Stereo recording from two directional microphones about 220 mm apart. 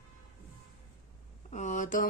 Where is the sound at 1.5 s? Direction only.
35° left (ahead or behind).